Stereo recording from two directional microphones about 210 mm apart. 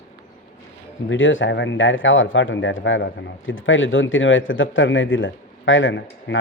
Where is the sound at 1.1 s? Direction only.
65° left (ahead or behind).